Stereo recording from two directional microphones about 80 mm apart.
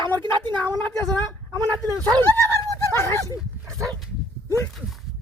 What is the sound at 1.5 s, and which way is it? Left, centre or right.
Speech, right.